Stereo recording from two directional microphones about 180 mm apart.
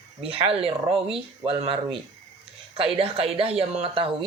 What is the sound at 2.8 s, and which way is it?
Speech, 30° right (ahead or behind).